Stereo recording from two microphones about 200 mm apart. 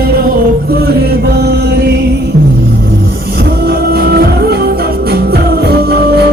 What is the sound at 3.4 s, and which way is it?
Music, 50° right (ahead or behind).